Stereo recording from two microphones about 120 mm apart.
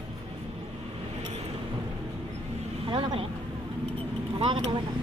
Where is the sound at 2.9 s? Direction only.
45° right (ahead or behind).